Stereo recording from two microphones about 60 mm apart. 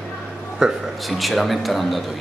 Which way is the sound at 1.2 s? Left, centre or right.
Centre.